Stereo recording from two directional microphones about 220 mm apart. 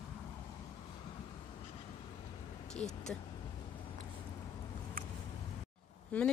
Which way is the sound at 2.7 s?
5° left (ahead or behind).